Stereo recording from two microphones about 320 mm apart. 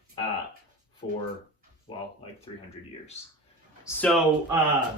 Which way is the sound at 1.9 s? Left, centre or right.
Centre.